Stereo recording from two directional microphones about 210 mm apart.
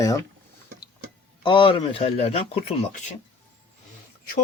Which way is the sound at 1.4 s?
25° left (ahead or behind).